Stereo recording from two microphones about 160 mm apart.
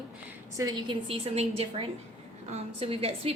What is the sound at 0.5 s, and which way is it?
Speech, 25° right (ahead or behind).